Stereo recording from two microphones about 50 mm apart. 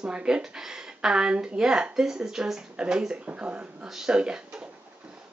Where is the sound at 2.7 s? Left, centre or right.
Right.